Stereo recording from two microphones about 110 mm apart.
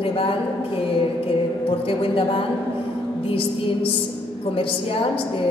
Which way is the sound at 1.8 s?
55° left (ahead or behind).